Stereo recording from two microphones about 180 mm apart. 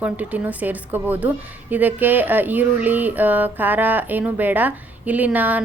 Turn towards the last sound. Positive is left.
turn(degrees=-10)  # may be behind; listen again after turning